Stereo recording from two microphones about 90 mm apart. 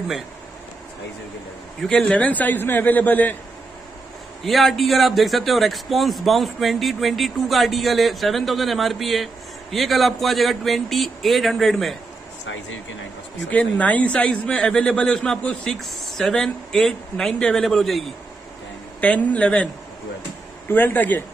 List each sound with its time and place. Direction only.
1.8 s a man's voice: 10° left (ahead or behind)
4.5 s a man's voice: centre (ahead or behind)
13.5 s a man's voice: 15° left (ahead or behind)
18.9 s a man's voice: 15° left (ahead or behind)